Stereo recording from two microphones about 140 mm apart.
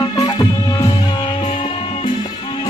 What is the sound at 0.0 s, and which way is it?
Music, 25° left (ahead or behind).